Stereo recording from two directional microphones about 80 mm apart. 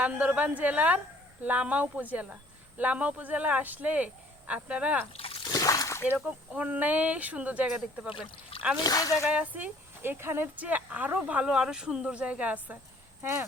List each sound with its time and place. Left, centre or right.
0.0 s speech: centre
5.5 s splash: left
6.1 s speech: centre
8.8 s speech: left
9.3 s speech: centre
11.4 s speech: centre